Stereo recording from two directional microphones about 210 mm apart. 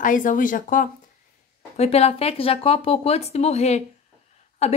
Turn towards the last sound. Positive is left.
turn(degrees=30)  # may be behind; listen again after turning